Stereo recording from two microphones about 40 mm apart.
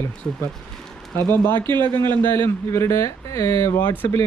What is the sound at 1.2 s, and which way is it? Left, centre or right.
Speech, left.